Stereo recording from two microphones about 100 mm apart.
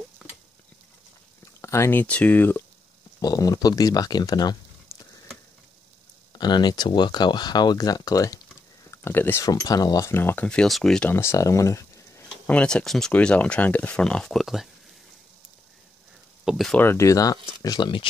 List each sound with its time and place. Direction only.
0.2 s a sound: 5° right (ahead or behind)
1.4 s speech: 30° left (ahead or behind)
3.2 s speech: 40° left (ahead or behind)
6.3 s speech: 45° left (ahead or behind)
8.9 s speech: 25° left (ahead or behind)
9.5 s speech: 40° left (ahead or behind)
10.1 s speech: 20° left (ahead or behind); by 11.1 s 5° left (ahead or behind)
11.1 s speech: 25° left (ahead or behind)
12.4 s speech: 10° left (ahead or behind)
16.4 s speech: centre (ahead or behind)
16.7 s speech: 25° left (ahead or behind); by 18.0 s 50° left (ahead or behind)